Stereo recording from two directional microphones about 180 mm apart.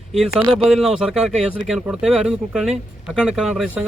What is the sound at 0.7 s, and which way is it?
Speech, centre (ahead or behind).